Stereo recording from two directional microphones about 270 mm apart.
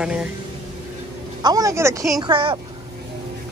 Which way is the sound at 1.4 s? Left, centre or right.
Centre.